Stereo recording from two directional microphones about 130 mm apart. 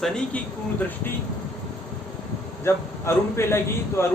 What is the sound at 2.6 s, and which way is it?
A man's voice, 20° left (ahead or behind).